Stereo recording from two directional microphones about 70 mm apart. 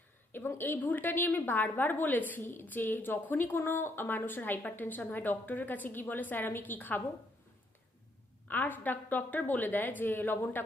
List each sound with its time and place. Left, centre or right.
0.3 s a woman's voice: left
8.4 s a woman's voice: left